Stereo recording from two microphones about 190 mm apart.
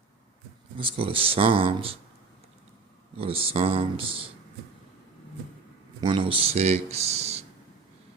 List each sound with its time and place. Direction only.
0.8 s speech: 30° right (ahead or behind)
3.2 s speech: 30° right (ahead or behind)
6.0 s speech: 25° right (ahead or behind)